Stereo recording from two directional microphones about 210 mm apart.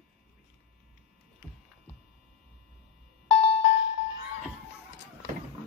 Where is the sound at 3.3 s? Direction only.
30° left (ahead or behind).